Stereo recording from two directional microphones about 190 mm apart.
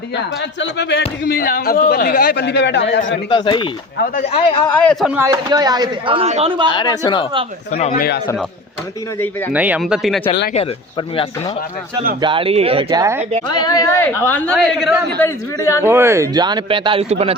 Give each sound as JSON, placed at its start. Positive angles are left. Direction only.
{"t": 0.6, "sound": "speech", "side_deg": 65}
{"t": 3.2, "sound": "speech", "side_deg": 25}
{"t": 4.0, "sound": "speech", "side_deg": 45}
{"t": 4.3, "sound": "speech", "side_deg": 30}
{"t": 4.6, "sound": "speech", "side_deg": 5}
{"t": 5.1, "sound": "speech", "side_deg": -20}
{"t": 6.7, "sound": "speech", "side_deg": 25}
{"t": 7.7, "sound": "a man's voice", "side_deg": 40}
{"t": 9.5, "sound": "speech", "side_deg": -10}
{"t": 12.2, "sound": "speech", "side_deg": -25}
{"t": 13.5, "sound": "a woman's voice", "side_deg": 20}
{"t": 15.2, "sound": "a woman's voice", "side_deg": 15}
{"t": 15.8, "sound": "speech", "side_deg": -10}